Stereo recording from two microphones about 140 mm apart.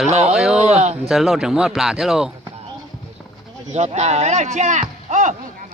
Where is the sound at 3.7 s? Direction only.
55° right (ahead or behind).